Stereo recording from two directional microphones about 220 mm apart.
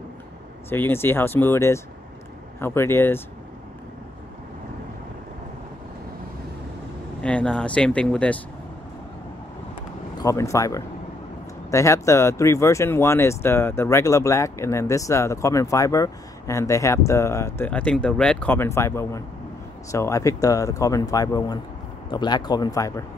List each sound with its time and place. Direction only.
0.7 s speech: 10° left (ahead or behind)
7.2 s speech: 5° left (ahead or behind)
9.8 s a sound: 15° left (ahead or behind)
11.7 s speech: 15° left (ahead or behind)